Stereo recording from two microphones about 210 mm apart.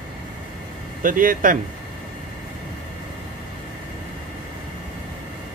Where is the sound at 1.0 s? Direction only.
40° right (ahead or behind).